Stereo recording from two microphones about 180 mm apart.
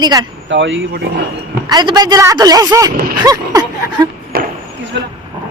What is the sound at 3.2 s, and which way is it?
Speech, 20° right (ahead or behind).